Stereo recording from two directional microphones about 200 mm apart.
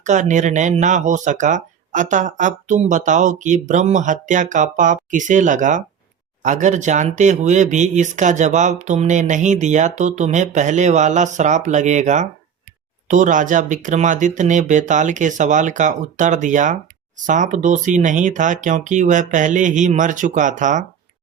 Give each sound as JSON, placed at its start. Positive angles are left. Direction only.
{"t": 0.0, "sound": "speech", "side_deg": -35}